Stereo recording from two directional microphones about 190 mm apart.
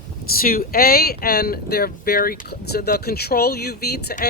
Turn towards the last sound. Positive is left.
turn(degrees=55)  # may be behind; listen again after turning